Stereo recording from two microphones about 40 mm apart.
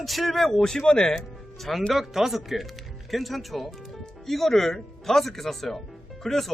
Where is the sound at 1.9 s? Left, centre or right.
Centre.